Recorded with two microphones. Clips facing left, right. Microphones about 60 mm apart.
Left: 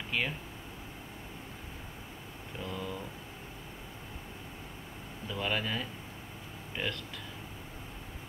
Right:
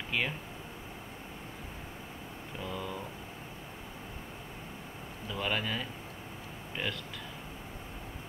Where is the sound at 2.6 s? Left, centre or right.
Centre.